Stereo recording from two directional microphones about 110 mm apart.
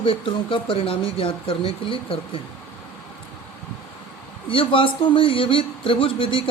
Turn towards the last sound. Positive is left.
turn(degrees=50)  # may be behind; listen again after turning